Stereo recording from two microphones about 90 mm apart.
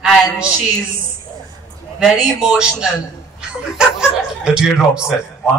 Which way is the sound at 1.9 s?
5° right (ahead or behind).